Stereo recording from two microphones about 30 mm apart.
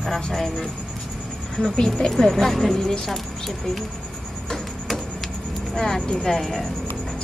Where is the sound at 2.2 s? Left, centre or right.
Centre.